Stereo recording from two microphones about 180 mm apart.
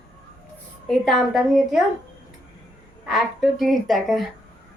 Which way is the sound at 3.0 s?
Centre (ahead or behind).